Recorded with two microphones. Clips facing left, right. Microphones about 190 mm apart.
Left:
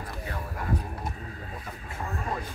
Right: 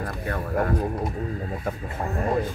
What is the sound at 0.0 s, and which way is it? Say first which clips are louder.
Speech: right 7 dB; 60° right (ahead or behind).